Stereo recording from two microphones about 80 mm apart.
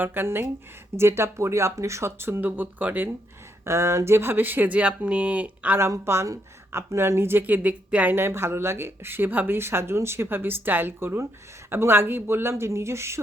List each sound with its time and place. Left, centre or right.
0.0 s speech: right
3.6 s speech: right; by 5.7 s centre
5.9 s speech: right; by 8.1 s centre
8.1 s speech: right